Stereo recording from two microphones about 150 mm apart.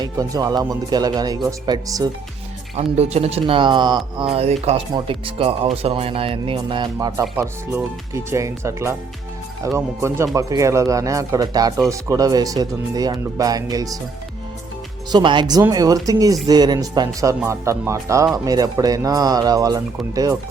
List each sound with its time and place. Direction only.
0.0 s speech: 25° right (ahead or behind)
2.7 s speech: 45° right (ahead or behind); by 14.0 s 25° right (ahead or behind)
15.1 s speech: 30° right (ahead or behind)